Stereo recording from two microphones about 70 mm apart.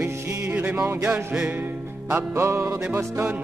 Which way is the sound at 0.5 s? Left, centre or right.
Right.